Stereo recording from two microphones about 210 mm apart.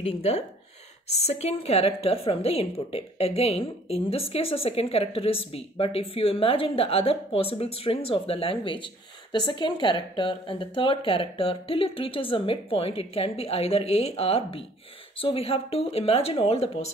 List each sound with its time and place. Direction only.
0.0 s a woman's voice: 30° left (ahead or behind)